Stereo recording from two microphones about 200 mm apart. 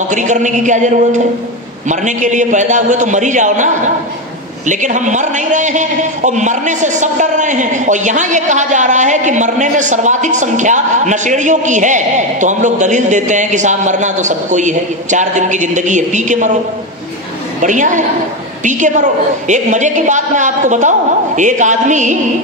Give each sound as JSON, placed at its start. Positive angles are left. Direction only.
{"t": 0.1, "sound": "a man's voice", "side_deg": -40}
{"t": 17.6, "sound": "a man's voice", "side_deg": -40}